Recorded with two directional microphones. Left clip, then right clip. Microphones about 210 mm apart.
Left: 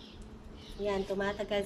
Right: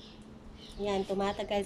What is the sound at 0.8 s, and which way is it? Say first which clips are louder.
Speech: right 1 dB; 15° right (ahead or behind).